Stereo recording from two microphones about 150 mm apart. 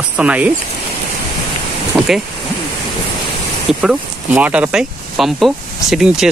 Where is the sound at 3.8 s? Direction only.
5° right (ahead or behind).